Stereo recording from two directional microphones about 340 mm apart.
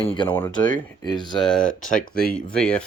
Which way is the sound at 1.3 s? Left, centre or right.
Centre.